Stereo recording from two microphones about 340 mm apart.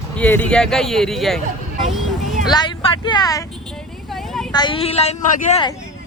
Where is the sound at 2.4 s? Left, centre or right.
Centre.